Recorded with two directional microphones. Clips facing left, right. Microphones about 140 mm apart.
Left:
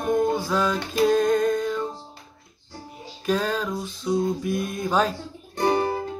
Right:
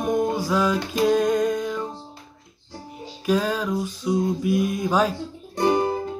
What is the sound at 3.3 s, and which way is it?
Music, 10° right (ahead or behind).